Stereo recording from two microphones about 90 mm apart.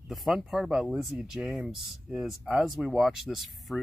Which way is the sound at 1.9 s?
Centre (ahead or behind).